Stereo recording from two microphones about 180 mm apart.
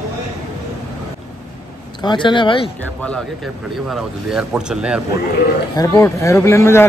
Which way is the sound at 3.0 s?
5° left (ahead or behind).